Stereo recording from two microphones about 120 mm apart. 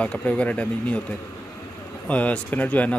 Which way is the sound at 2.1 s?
10° left (ahead or behind).